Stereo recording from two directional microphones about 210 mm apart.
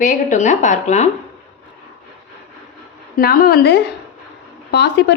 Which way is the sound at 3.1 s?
45° left (ahead or behind).